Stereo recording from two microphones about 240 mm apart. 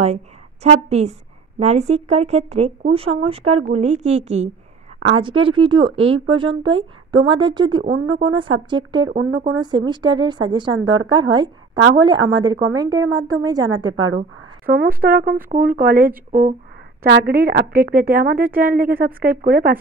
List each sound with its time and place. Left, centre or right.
0.7 s speech: right
7.9 s speech: right
8.3 s a woman's voice: right
13.9 s a woman's voice: right
14.7 s a woman's voice: right